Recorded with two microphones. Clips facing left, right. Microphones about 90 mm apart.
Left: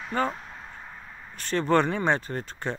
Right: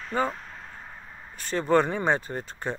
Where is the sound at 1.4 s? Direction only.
10° right (ahead or behind).